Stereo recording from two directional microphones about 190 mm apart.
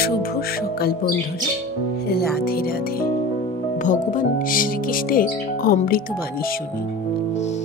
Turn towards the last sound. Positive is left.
turn(degrees=45)  # may be behind; listen again after turning